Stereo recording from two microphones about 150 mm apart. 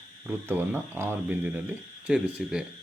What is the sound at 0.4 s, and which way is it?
Speech, 15° right (ahead or behind).